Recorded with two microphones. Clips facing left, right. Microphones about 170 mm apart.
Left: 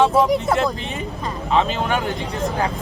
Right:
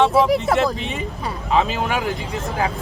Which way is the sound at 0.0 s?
5° right (ahead or behind).